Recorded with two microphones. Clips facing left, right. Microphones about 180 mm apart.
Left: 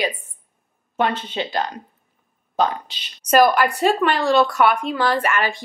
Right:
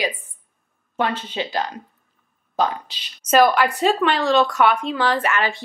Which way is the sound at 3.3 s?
10° left (ahead or behind).